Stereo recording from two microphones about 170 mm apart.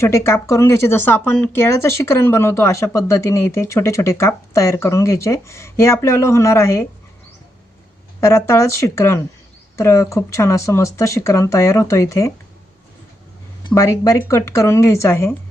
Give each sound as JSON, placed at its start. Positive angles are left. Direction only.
{"t": 0.0, "sound": "speech", "side_deg": 15}
{"t": 8.2, "sound": "speech", "side_deg": 15}
{"t": 13.7, "sound": "speech", "side_deg": 20}